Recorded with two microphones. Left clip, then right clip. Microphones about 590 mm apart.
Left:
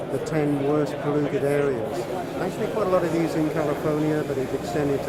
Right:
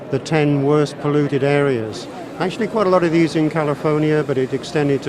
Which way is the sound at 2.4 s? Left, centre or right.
Right.